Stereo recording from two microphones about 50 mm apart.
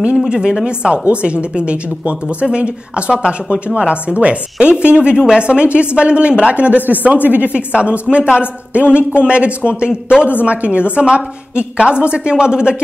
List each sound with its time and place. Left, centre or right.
0.3 s a woman's voice: centre
5.1 s speech: centre
5.4 s a woman's voice: right